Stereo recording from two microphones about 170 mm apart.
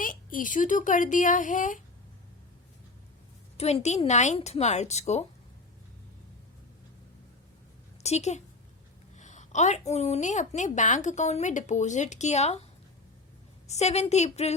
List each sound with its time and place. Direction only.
0.0 s a woman's voice: 55° left (ahead or behind)
3.6 s a woman's voice: 40° left (ahead or behind)
8.0 s a woman's voice: 40° left (ahead or behind)
13.7 s a woman's voice: 40° left (ahead or behind)